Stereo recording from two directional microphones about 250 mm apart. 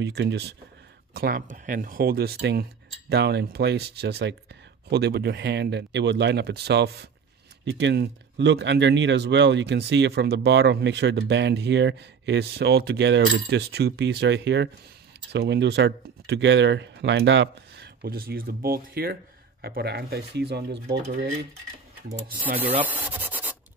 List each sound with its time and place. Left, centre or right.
0.0 s speech: right
22.6 s rub: centre